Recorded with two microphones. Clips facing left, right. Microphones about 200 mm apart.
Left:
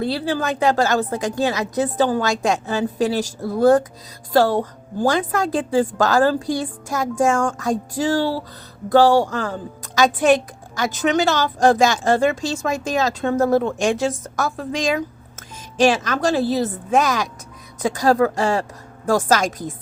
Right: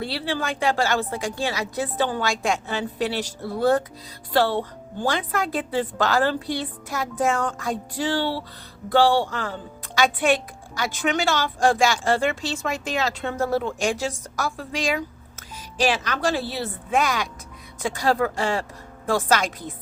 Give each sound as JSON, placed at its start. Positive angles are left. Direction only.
{"t": 0.1, "sound": "a woman's voice", "side_deg": 45}